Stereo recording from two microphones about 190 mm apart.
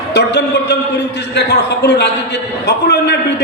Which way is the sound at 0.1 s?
60° left (ahead or behind).